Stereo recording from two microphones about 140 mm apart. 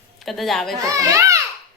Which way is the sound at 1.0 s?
20° right (ahead or behind).